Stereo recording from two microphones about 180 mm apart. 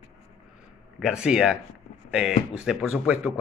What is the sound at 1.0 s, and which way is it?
A man's voice, 5° right (ahead or behind).